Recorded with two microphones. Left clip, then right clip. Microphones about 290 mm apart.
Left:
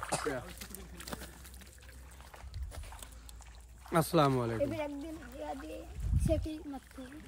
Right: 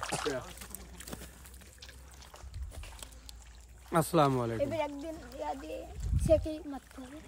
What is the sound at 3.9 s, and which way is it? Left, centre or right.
Speech, centre.